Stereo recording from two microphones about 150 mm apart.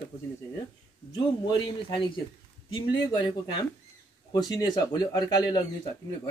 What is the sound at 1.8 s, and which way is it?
Speech, 35° left (ahead or behind).